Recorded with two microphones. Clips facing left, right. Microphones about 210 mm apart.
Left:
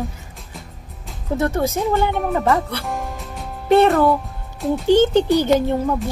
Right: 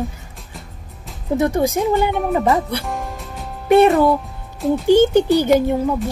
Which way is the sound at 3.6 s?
10° right (ahead or behind).